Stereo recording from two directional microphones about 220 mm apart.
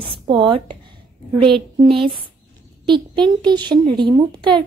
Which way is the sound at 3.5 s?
20° right (ahead or behind).